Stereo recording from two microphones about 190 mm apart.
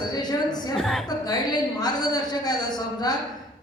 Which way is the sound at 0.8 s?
Centre (ahead or behind).